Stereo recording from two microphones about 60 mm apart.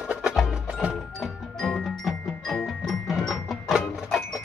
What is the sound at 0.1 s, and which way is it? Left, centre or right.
Music, centre.